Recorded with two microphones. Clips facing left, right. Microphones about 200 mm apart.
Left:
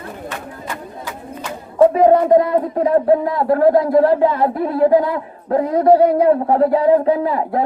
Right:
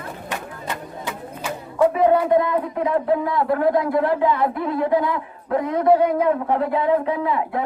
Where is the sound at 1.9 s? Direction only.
35° left (ahead or behind).